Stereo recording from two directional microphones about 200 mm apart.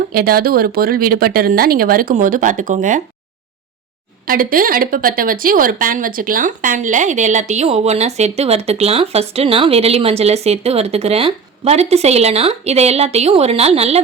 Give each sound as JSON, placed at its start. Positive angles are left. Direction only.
{"t": 0.1, "sound": "speech", "side_deg": -50}
{"t": 4.3, "sound": "speech", "side_deg": -45}